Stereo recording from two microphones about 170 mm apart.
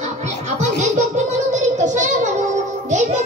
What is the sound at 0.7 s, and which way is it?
A child's voice, 45° right (ahead or behind).